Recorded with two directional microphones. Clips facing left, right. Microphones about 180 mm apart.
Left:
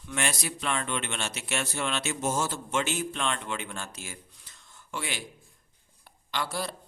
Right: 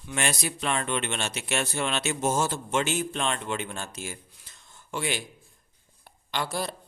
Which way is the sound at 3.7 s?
20° right (ahead or behind).